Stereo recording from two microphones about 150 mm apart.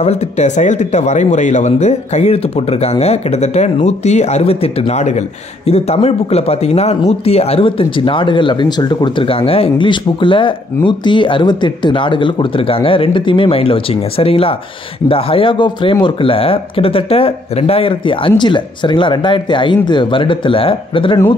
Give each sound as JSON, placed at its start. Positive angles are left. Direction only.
{"t": 0.0, "sound": "speech", "side_deg": 50}